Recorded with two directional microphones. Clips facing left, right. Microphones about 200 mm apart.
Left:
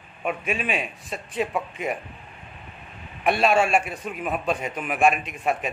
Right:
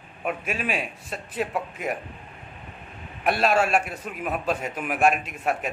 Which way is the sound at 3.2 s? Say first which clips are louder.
Left 2 dB; centre (ahead or behind).